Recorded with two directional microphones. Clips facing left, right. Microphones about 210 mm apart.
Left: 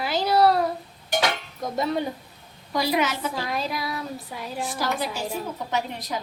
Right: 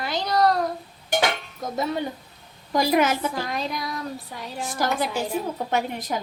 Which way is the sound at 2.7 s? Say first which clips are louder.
Right 4 dB; 50° right (ahead or behind).